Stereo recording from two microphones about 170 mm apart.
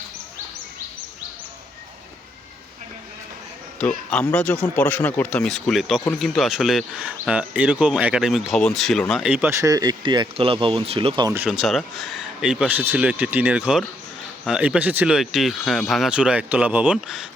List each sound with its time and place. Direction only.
3.8 s speech: 5° left (ahead or behind)
9.2 s speech: 10° right (ahead or behind); by 11.3 s 25° right (ahead or behind)
11.3 s speech: 5° right (ahead or behind)